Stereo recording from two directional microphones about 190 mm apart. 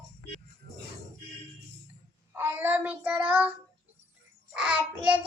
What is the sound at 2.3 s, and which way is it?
Child singing, 10° right (ahead or behind).